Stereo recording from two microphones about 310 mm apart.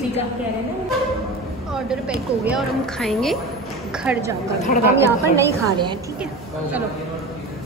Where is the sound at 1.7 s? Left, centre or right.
Centre.